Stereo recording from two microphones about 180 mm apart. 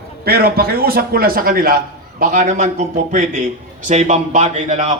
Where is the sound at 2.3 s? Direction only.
40° right (ahead or behind).